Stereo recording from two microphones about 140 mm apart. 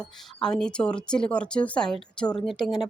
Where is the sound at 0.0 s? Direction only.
5° left (ahead or behind).